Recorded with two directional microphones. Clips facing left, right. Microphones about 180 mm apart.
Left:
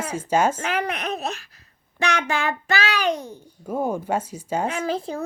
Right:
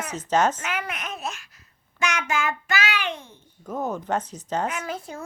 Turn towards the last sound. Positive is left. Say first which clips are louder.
# left 6 dB
turn(degrees=30)  # may be behind; listen again after turning